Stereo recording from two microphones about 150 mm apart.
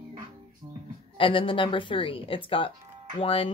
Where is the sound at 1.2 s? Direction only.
35° left (ahead or behind).